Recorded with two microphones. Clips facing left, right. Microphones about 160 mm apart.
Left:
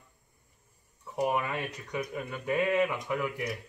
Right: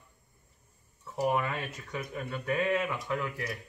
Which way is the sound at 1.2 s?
10° left (ahead or behind).